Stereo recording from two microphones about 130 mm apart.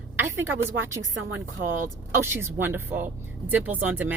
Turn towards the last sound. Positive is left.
turn(degrees=-10)  # may be behind; listen again after turning